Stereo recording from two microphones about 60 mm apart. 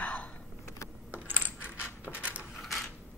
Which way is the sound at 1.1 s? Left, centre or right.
Right.